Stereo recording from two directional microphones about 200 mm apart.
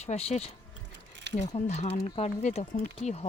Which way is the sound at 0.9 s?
60° right (ahead or behind).